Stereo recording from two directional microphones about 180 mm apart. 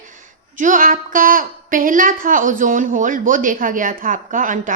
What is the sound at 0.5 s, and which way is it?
A woman's voice, 45° right (ahead or behind).